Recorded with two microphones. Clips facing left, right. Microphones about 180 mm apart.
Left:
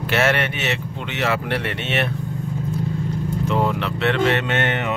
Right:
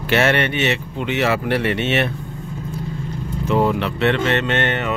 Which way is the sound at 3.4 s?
5° right (ahead or behind).